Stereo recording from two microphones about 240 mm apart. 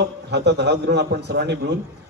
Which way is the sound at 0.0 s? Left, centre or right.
Right.